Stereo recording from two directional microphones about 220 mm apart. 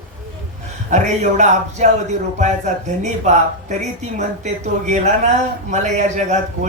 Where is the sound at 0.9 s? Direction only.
35° right (ahead or behind).